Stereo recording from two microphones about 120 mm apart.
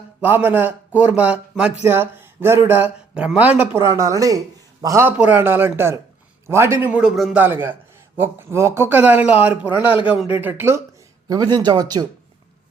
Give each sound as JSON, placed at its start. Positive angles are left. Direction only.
{"t": 0.2, "sound": "a man's voice", "side_deg": -15}
{"t": 3.8, "sound": "a man's voice", "side_deg": -25}
{"t": 5.0, "sound": "a man's voice", "side_deg": -15}
{"t": 6.8, "sound": "a man's voice", "side_deg": -10}
{"t": 7.3, "sound": "a man's voice", "side_deg": -15}
{"t": 11.3, "sound": "speech", "side_deg": -35}